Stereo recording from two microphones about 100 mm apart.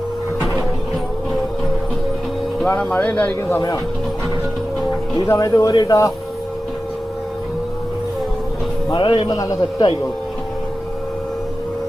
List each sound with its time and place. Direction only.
2.6 s speech: 15° left (ahead or behind)
5.2 s speech: 30° left (ahead or behind)
9.0 s a man's voice: 55° left (ahead or behind)
9.3 s a man's voice: 40° left (ahead or behind)